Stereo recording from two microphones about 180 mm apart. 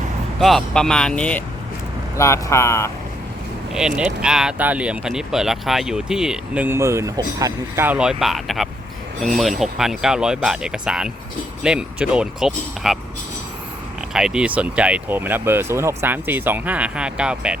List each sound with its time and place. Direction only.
0.3 s speech: centre (ahead or behind)
3.8 s speech: 5° right (ahead or behind)
14.1 s speech: 5° right (ahead or behind)